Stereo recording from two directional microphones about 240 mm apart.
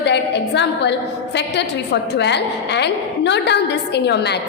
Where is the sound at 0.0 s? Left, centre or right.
Left.